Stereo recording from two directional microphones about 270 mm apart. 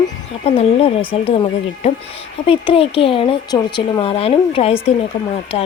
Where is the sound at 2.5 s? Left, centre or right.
Centre.